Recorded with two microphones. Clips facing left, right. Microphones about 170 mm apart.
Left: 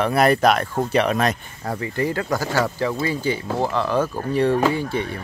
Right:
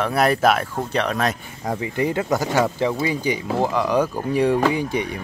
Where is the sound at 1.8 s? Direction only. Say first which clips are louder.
Right 1 dB; 20° right (ahead or behind).